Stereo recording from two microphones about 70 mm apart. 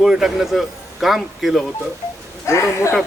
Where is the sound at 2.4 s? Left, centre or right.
Left.